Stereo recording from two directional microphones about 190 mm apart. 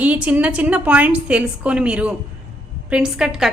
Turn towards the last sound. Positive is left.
turn(degrees=-5)  # may be behind; listen again after turning